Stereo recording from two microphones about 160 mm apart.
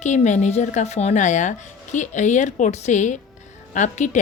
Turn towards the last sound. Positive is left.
turn(degrees=50)  # may be behind; listen again after turning